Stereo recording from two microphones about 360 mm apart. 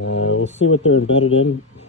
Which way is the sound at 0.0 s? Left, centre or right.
Left.